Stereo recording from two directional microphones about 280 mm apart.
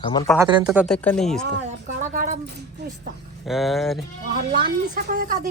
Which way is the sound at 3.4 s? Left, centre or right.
Centre.